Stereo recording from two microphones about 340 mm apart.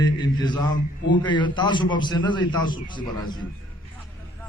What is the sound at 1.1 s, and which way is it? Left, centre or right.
A man's voice, centre.